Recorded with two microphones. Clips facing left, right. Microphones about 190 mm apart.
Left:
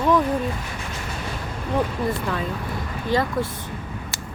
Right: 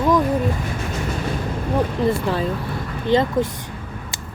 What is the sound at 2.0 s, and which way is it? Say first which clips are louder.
Speech: right 5 dB; 30° right (ahead or behind).